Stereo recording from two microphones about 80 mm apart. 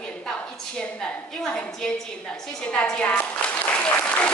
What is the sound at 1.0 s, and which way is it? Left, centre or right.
Speech, centre.